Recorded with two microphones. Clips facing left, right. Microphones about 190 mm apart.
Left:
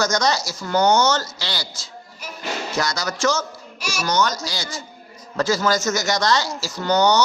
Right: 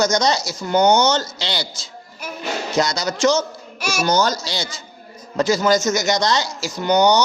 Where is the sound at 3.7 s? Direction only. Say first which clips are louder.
Right 5 dB; 50° right (ahead or behind).